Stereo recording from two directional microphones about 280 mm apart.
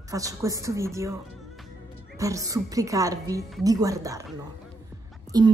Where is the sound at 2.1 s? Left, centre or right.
Centre.